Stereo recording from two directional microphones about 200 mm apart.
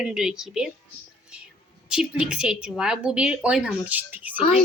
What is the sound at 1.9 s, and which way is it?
A woman's voice, 5° right (ahead or behind).